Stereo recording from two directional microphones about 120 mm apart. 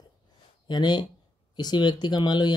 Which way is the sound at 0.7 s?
40° left (ahead or behind).